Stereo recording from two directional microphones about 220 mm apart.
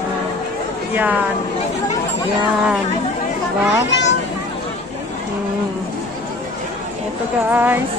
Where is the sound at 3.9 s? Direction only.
55° left (ahead or behind).